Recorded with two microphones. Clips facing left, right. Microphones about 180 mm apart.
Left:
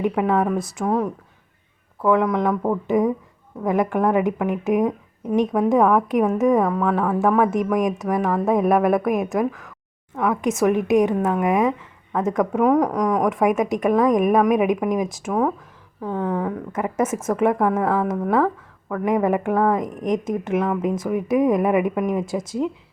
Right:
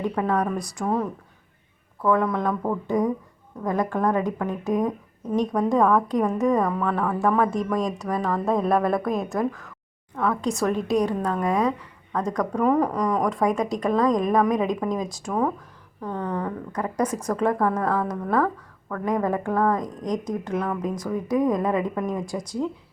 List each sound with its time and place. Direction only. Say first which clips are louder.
0.0 s a woman's voice: left 4 dB; 20° left (ahead or behind)
2.0 s speech: left 3 dB; 20° left (ahead or behind)
6.6 s a woman's voice: left 4 dB; 5° left (ahead or behind)
13.3 s speech: left 4 dB; 20° left (ahead or behind)
15.3 s a woman's voice: left 2 dB; 5° left (ahead or behind)
16.7 s speech: left 2 dB; 25° left (ahead or behind)